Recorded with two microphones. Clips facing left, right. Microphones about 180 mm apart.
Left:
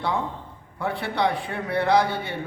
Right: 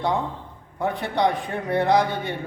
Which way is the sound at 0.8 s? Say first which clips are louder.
Right 2 dB; 15° right (ahead or behind).